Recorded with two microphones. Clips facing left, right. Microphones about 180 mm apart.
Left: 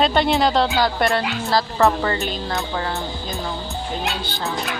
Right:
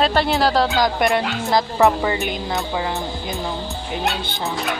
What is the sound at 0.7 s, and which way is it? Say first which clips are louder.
Speech: right 1 dB; 15° right (ahead or behind).